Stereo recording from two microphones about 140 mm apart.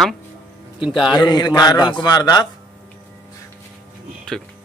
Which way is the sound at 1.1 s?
30° left (ahead or behind).